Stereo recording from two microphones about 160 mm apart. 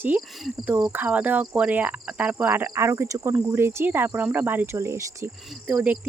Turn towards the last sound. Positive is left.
turn(degrees=-10)  # may be behind; listen again after turning